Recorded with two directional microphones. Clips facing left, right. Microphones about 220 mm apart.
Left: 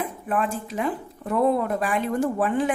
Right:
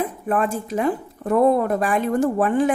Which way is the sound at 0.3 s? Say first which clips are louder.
Right 3 dB; 45° right (ahead or behind).